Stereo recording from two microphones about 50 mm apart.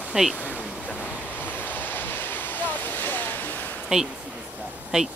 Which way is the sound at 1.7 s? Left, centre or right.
Left.